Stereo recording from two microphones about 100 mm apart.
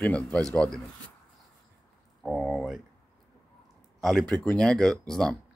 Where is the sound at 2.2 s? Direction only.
Centre (ahead or behind).